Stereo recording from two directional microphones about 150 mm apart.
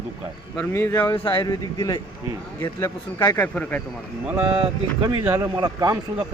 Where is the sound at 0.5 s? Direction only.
20° left (ahead or behind).